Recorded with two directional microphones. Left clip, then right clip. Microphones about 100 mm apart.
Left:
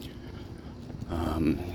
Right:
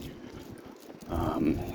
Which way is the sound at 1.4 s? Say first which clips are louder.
Left 1 dB; 60° left (ahead or behind).